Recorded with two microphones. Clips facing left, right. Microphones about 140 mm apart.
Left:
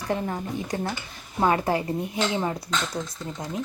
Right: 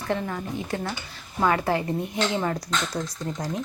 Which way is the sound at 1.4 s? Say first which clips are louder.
Even; 25° left (ahead or behind).